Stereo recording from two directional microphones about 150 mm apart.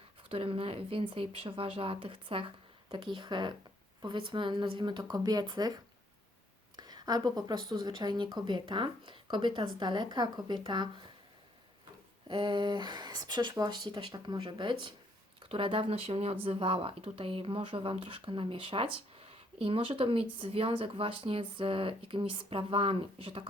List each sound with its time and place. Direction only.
0.2 s a woman's voice: 35° right (ahead or behind)
12.3 s a woman's voice: 30° right (ahead or behind)